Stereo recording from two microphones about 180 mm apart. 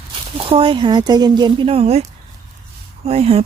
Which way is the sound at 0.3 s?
30° right (ahead or behind).